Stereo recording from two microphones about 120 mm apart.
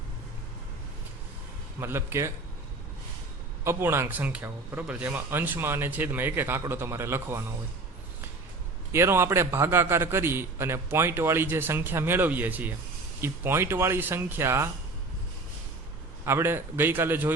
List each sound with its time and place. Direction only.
1.8 s a man's voice: 20° right (ahead or behind)
3.6 s a man's voice: 20° right (ahead or behind)
8.9 s a man's voice: 20° right (ahead or behind)
16.2 s a man's voice: 20° right (ahead or behind)